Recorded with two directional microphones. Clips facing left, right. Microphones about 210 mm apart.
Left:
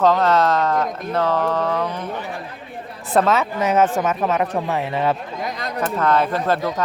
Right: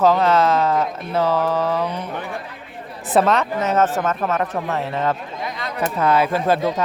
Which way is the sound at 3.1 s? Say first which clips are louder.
Right 1 dB; centre (ahead or behind).